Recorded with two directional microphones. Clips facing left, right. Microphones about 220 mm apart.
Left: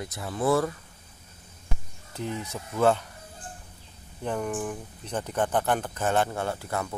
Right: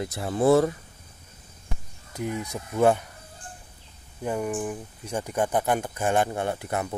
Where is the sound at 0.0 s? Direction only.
30° right (ahead or behind).